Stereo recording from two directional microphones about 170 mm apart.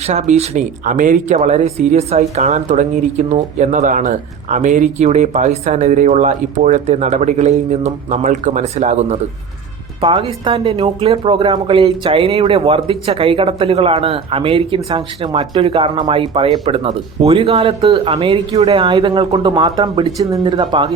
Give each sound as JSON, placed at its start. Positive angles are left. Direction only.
{"t": 0.1, "sound": "speech", "side_deg": -40}
{"t": 10.0, "sound": "speech", "side_deg": -30}